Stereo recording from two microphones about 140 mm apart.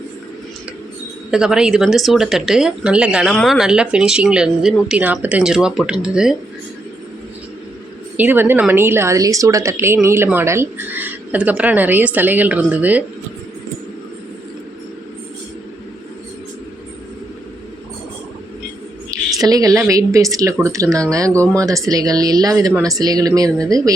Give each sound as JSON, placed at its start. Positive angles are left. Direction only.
{"t": 1.3, "sound": "speech", "side_deg": -5}
{"t": 8.1, "sound": "a woman's voice", "side_deg": -15}
{"t": 19.4, "sound": "speech", "side_deg": -25}